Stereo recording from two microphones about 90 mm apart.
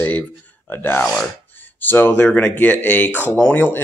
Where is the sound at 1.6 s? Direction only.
20° left (ahead or behind).